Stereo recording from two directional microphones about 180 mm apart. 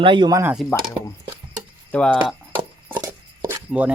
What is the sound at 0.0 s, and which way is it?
Speech, 25° right (ahead or behind).